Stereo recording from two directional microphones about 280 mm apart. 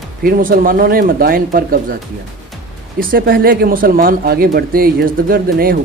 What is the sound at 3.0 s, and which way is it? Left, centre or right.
Speech, right.